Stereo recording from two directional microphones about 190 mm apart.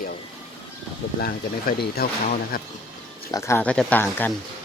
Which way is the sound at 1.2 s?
55° left (ahead or behind).